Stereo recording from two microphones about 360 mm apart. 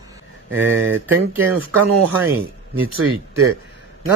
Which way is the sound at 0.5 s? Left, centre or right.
Right.